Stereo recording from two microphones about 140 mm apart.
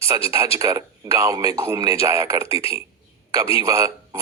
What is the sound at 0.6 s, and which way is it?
Speech, 20° right (ahead or behind).